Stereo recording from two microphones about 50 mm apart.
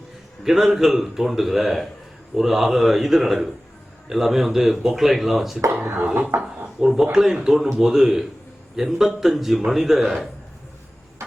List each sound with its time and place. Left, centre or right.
0.4 s a man's voice: centre
6.3 s speech: right
6.7 s a man's voice: centre